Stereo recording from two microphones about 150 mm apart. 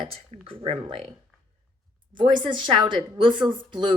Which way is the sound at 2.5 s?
30° right (ahead or behind).